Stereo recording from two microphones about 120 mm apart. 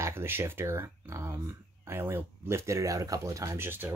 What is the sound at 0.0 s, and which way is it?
Speech, 20° right (ahead or behind).